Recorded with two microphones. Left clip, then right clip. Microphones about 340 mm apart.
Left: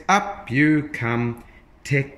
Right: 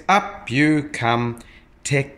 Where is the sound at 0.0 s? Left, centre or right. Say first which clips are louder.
Right 2 dB; centre.